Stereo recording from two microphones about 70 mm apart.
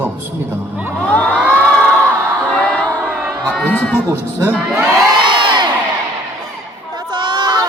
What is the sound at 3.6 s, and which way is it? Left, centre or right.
Speech, centre.